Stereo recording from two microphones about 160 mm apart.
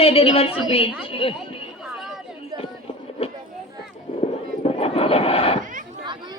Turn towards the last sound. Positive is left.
turn(degrees=35)  # may be behind; listen again after turning